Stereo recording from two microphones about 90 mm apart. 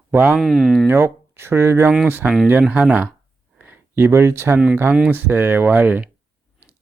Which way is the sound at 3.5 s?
20° right (ahead or behind).